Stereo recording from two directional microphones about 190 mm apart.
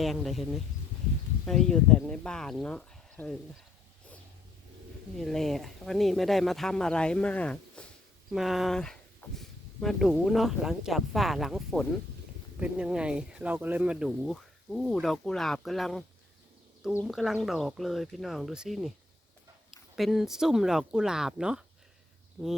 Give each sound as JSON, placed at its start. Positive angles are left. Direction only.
{"t": 0.0, "sound": "speech", "side_deg": 0}
{"t": 5.1, "sound": "speech", "side_deg": 0}
{"t": 20.0, "sound": "speech", "side_deg": 0}